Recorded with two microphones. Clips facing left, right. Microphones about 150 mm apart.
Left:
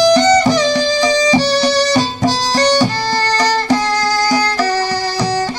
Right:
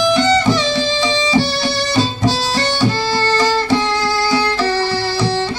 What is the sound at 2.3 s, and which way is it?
Music, 45° left (ahead or behind).